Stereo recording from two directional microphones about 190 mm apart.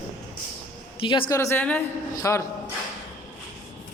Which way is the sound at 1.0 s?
25° left (ahead or behind).